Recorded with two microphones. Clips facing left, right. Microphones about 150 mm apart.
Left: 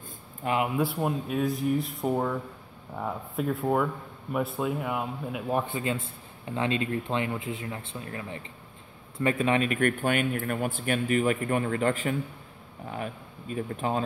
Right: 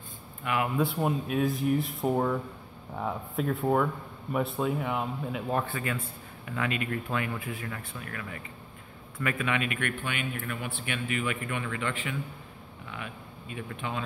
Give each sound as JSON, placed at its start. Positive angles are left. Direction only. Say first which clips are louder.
{"t": 0.4, "sound": "a man's voice", "louder": "left 3 dB", "side_deg": 35}
{"t": 0.7, "sound": "speech", "louder": "even", "side_deg": 0}
{"t": 5.7, "sound": "a man's voice", "louder": "left 3 dB", "side_deg": 20}